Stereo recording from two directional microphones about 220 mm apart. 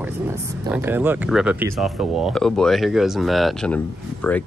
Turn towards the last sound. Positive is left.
turn(degrees=5)  # may be behind; listen again after turning